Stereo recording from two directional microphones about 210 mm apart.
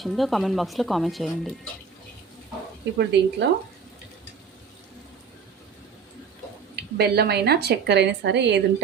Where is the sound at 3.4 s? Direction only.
55° right (ahead or behind).